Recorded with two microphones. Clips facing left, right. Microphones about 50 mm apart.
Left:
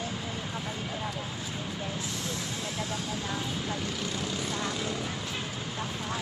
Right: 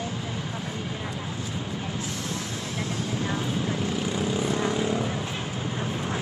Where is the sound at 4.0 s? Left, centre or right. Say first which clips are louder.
Right 7 dB; centre.